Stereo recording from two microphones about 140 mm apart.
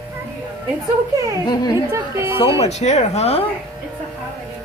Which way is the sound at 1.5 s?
30° left (ahead or behind).